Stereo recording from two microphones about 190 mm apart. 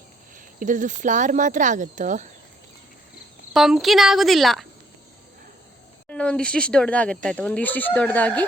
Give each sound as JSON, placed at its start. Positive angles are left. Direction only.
{"t": 0.3, "sound": "speech", "side_deg": -45}
{"t": 3.5, "sound": "speech", "side_deg": 0}
{"t": 6.1, "sound": "speech", "side_deg": 5}